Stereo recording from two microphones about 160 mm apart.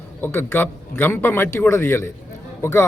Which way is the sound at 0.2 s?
15° left (ahead or behind).